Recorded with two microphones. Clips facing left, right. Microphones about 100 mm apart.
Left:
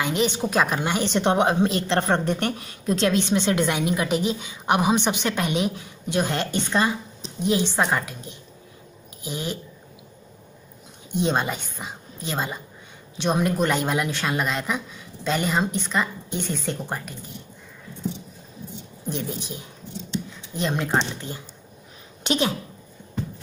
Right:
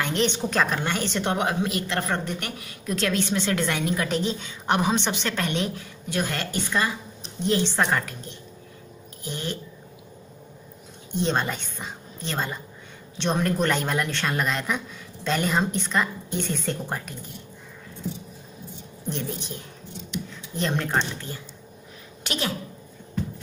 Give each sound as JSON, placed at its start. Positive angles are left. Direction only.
{"t": 0.0, "sound": "a woman's voice", "side_deg": 5}
{"t": 7.4, "sound": "a woman's voice", "side_deg": 10}
{"t": 11.1, "sound": "a woman's voice", "side_deg": 10}
{"t": 19.0, "sound": "a woman's voice", "side_deg": 5}
{"t": 20.9, "sound": "a woman's voice", "side_deg": 25}